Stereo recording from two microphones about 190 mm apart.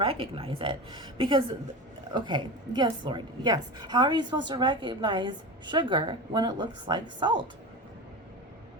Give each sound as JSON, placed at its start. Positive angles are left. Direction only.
{"t": 0.0, "sound": "a woman's voice", "side_deg": -30}